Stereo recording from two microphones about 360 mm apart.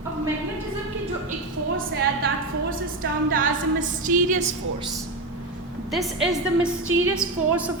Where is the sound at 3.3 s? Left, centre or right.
Right.